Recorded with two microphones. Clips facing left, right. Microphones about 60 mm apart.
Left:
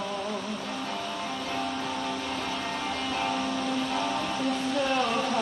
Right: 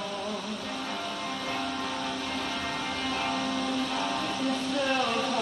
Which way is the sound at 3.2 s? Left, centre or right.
Left.